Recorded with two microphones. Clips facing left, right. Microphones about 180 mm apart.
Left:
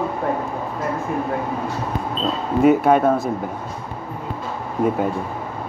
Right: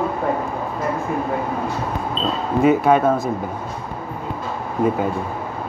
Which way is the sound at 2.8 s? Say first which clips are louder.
Even; 55° left (ahead or behind).